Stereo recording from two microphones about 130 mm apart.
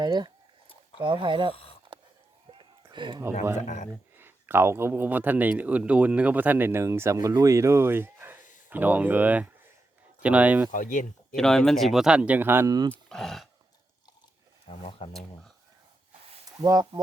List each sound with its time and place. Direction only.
0.0 s speech: 35° right (ahead or behind)
2.5 s a sound: 40° right (ahead or behind)
4.2 s speech: 15° right (ahead or behind)
10.7 s speech: 85° left
11.3 s speech: 5° left (ahead or behind); by 12.7 s 15° right (ahead or behind)
12.9 s speech: 5° left (ahead or behind)
14.7 s speech: 50° left (ahead or behind)
16.5 s speech: 25° right (ahead or behind)